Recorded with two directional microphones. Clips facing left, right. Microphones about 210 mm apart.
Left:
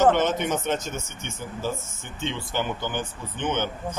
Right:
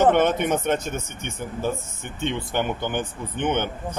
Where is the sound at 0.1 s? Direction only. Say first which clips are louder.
Right 3 dB; 55° right (ahead or behind).